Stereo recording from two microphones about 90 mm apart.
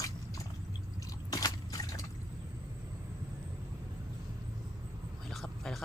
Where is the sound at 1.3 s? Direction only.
45° left (ahead or behind).